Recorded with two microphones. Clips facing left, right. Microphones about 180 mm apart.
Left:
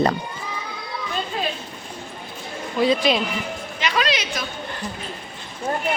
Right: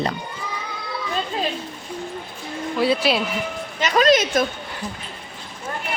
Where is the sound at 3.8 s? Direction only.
45° right (ahead or behind).